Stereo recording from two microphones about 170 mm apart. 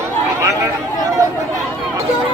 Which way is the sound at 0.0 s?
15° right (ahead or behind).